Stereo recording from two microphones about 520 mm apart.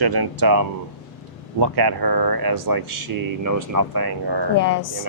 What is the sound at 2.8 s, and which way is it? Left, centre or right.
Speech, right.